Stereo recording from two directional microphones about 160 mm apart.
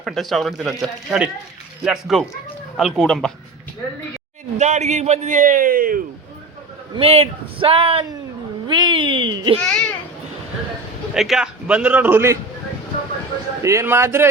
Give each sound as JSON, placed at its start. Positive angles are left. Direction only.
{"t": 0.0, "sound": "speech", "side_deg": 0}
{"t": 4.5, "sound": "a man's voice", "side_deg": -45}
{"t": 6.9, "sound": "speech", "side_deg": -35}
{"t": 9.6, "sound": "speech", "side_deg": 5}
{"t": 11.1, "sound": "a man's voice", "side_deg": -5}
{"t": 13.6, "sound": "a man's voice", "side_deg": -20}